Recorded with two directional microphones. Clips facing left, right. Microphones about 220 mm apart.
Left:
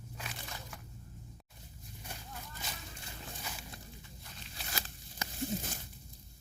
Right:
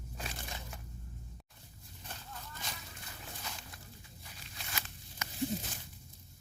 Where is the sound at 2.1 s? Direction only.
10° left (ahead or behind).